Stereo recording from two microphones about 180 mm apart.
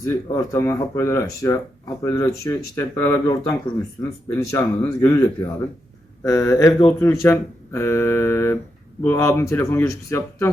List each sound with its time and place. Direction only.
0.0 s speech: 15° left (ahead or behind)